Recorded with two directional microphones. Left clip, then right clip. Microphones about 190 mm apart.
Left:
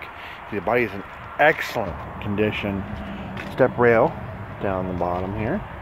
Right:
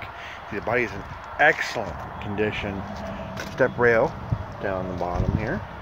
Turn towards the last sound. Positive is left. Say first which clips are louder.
# left 3 dB
turn(degrees=30)  # may be behind; listen again after turning